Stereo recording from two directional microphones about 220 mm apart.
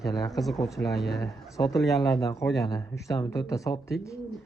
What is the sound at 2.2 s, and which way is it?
Speech, 15° left (ahead or behind).